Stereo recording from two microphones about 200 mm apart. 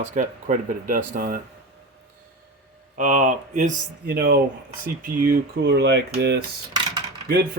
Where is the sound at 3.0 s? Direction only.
40° right (ahead or behind).